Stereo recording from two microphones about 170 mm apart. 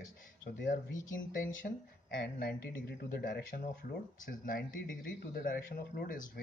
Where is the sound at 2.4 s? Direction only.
65° left (ahead or behind).